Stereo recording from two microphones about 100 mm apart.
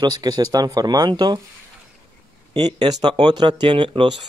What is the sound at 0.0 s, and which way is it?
Speech, 45° right (ahead or behind).